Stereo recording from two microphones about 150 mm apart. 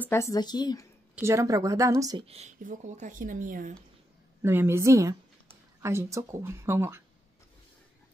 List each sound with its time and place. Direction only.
0.0 s a woman's voice: 15° left (ahead or behind)
1.2 s speech: 20° right (ahead or behind)
2.2 s speech: 40° right (ahead or behind)
2.6 s speech: 55° right (ahead or behind)
4.4 s speech: 15° right (ahead or behind)